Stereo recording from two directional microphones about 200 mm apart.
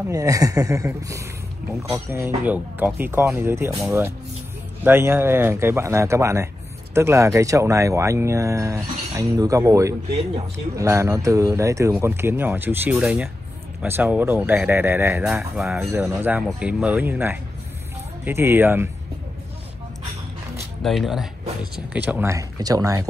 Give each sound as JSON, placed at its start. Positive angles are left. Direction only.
{"t": 0.1, "sound": "speech", "side_deg": -15}
{"t": 20.8, "sound": "speech", "side_deg": 0}